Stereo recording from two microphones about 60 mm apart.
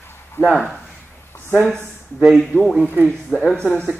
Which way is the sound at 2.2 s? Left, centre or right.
Centre.